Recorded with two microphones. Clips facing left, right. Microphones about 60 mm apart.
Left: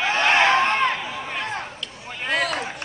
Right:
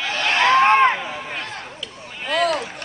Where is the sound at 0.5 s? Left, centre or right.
Right.